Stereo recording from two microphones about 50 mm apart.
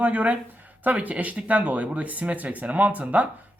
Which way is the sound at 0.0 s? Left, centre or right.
Right.